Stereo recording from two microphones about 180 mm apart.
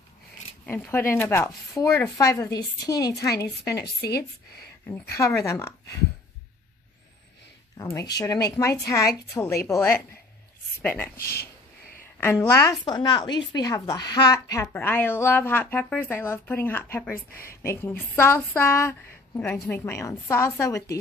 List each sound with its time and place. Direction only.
0.7 s a woman's voice: 5° left (ahead or behind)
3.8 s a woman's voice: 65° left (ahead or behind)
4.8 s a woman's voice: 15° left (ahead or behind)
7.7 s a woman's voice: 15° left (ahead or behind)
11.1 s a woman's voice: 60° left (ahead or behind)
12.2 s a woman's voice: 15° left (ahead or behind)
12.7 s a woman's voice: 25° left (ahead or behind)